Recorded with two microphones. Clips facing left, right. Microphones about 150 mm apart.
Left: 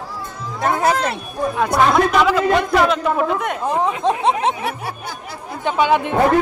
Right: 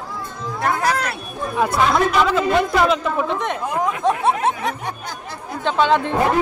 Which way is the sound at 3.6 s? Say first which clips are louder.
Left 2 dB; 25° left (ahead or behind).